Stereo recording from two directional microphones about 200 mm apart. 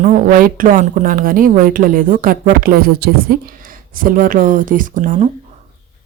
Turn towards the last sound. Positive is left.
turn(degrees=-40)  # may be behind; listen again after turning